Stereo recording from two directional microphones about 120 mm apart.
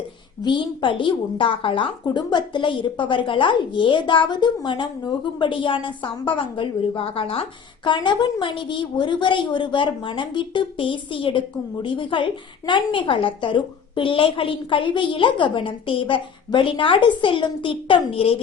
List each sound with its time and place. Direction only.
0.4 s a woman's voice: 40° left (ahead or behind)
7.9 s a woman's voice: 40° left (ahead or behind)